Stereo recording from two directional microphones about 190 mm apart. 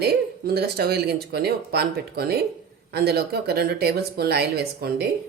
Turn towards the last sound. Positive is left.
turn(degrees=-55)  # may be behind; listen again after turning